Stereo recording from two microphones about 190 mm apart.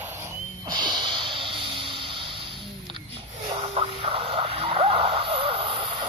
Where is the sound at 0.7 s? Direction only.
25° right (ahead or behind).